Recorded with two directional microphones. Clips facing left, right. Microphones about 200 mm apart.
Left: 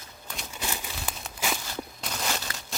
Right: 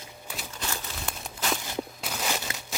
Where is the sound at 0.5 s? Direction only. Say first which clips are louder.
Left 2 dB; 10° left (ahead or behind).